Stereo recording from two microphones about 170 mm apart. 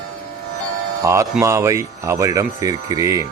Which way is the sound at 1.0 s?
20° right (ahead or behind).